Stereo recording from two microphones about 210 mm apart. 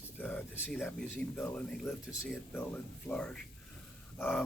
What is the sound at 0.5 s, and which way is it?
Speech, centre (ahead or behind).